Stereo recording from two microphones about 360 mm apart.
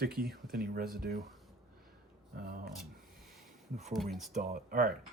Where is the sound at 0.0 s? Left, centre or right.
Right.